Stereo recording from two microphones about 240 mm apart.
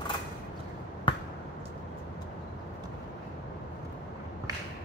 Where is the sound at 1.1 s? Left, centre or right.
Centre.